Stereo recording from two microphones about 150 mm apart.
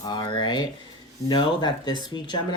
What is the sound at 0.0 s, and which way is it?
Speech, 30° left (ahead or behind).